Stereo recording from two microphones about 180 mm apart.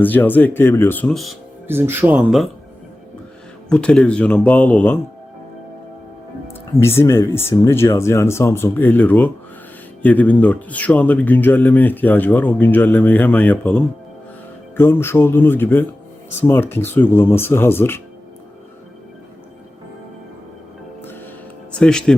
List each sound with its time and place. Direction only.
0.0 s speech: 10° left (ahead or behind)
1.6 s speech: 10° right (ahead or behind)
3.7 s speech: 5° left (ahead or behind)
6.7 s speech: 15° left (ahead or behind)
21.8 s speech: 5° left (ahead or behind)